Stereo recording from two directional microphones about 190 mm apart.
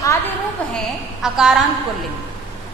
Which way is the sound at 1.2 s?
5° right (ahead or behind).